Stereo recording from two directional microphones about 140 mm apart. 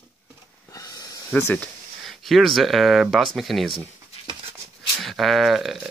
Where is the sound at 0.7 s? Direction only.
25° left (ahead or behind).